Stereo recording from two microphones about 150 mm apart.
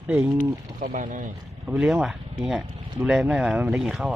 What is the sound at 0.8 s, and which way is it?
Speech, 60° right (ahead or behind).